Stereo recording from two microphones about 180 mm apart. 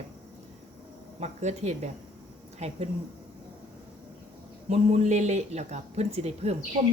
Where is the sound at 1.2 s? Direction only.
40° right (ahead or behind).